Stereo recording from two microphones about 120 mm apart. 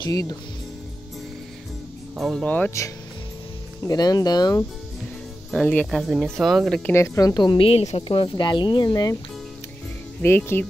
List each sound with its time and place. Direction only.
0.0 s a woman's voice: 30° left (ahead or behind)
2.1 s speech: centre (ahead or behind)
2.4 s speech: 15° left (ahead or behind)
3.8 s a woman's voice: 35° left (ahead or behind)
5.5 s speech: 5° left (ahead or behind)
6.9 s a woman's voice: 25° left (ahead or behind)
10.2 s speech: 20° left (ahead or behind)